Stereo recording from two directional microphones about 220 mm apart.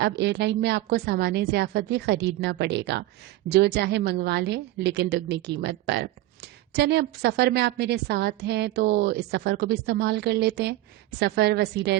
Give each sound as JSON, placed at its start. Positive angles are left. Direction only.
{"t": 0.0, "sound": "a woman's voice", "side_deg": -50}